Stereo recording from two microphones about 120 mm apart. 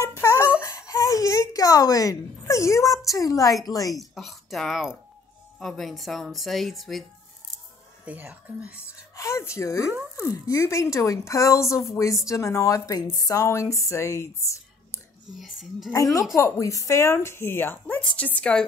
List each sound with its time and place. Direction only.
0.2 s a sound: 25° left (ahead or behind)
3.1 s speech: 30° left (ahead or behind)
3.9 s speech: centre (ahead or behind)
8.0 s speech: 10° right (ahead or behind)
8.8 s speech: 25° left (ahead or behind)
15.3 s speech: 5° right (ahead or behind)
15.9 s speech: 30° left (ahead or behind); by 18.7 s 5° left (ahead or behind)